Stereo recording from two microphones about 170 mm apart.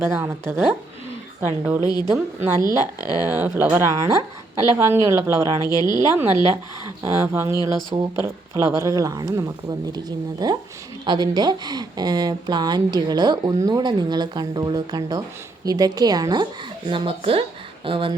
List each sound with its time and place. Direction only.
0.0 s speech: 15° right (ahead or behind)
1.8 s speech: 25° left (ahead or behind)
3.2 s speech: 10° right (ahead or behind)
5.6 s speech: 25° left (ahead or behind)
6.0 s speech: 15° right (ahead or behind); by 18.1 s 30° right (ahead or behind)